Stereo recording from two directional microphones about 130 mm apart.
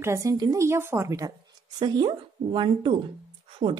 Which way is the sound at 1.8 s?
35° right (ahead or behind).